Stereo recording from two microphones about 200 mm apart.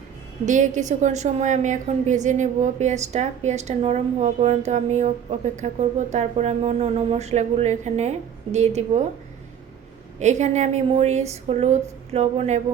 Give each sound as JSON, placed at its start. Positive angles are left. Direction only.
{"t": 0.4, "sound": "a woman's voice", "side_deg": -40}
{"t": 10.2, "sound": "a woman's voice", "side_deg": -35}